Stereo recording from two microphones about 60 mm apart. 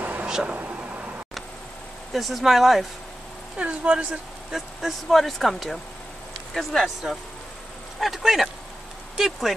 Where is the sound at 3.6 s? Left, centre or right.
Centre.